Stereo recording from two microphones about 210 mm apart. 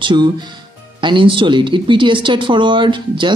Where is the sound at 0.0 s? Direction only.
20° right (ahead or behind).